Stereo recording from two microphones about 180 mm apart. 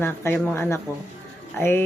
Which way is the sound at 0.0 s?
10° left (ahead or behind).